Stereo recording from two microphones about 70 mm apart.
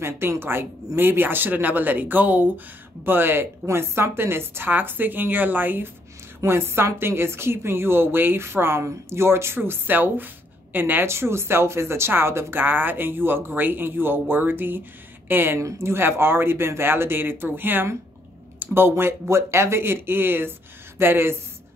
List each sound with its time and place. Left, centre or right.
0.0 s a woman's voice: right
11.1 s a woman's voice: right